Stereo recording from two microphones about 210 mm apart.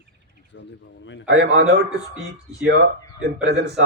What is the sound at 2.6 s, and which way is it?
A man's voice, 55° right (ahead or behind).